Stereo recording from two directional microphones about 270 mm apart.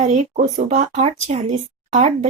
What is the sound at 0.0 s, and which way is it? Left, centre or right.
A woman's voice, right.